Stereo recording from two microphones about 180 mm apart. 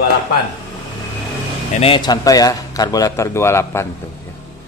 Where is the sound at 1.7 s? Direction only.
30° left (ahead or behind); by 3.9 s 15° left (ahead or behind).